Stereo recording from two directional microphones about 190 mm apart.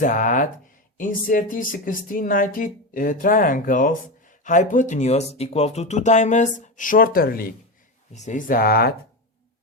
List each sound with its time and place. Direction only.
0.0 s speech: 45° left (ahead or behind)
8.1 s speech: 40° left (ahead or behind)